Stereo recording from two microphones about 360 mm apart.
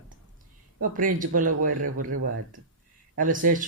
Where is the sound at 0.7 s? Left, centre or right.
Right.